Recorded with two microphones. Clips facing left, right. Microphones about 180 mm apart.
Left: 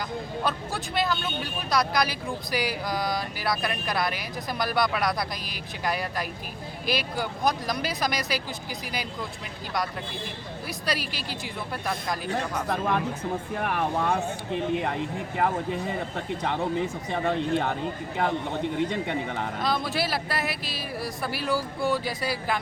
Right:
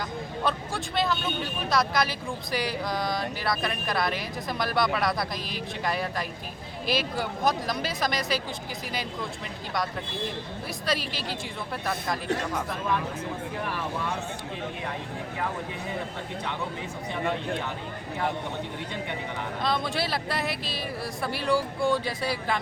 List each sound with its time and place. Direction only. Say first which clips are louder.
0.4 s speech: right 3 dB; centre (ahead or behind)
10.8 s speech: right 1 dB; centre (ahead or behind)
12.7 s speech: left 3 dB; 55° left (ahead or behind)
17.1 s speech: left 2 dB; 65° left (ahead or behind)
18.9 s speech: left 5 dB; 60° left (ahead or behind)
19.6 s speech: even; centre (ahead or behind)